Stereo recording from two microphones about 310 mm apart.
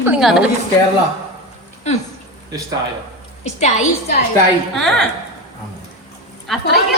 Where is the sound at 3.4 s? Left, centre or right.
Left.